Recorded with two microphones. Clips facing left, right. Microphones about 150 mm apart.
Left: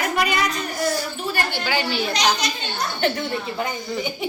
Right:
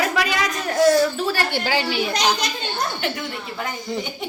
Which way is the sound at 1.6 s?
30° right (ahead or behind).